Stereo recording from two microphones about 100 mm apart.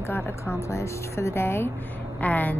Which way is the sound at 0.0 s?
25° left (ahead or behind).